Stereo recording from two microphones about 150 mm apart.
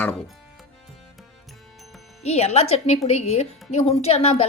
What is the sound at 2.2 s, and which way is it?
A woman's voice, 45° left (ahead or behind).